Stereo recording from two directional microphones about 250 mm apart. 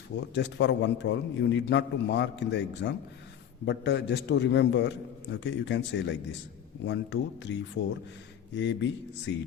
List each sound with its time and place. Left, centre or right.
0.3 s a man's voice: left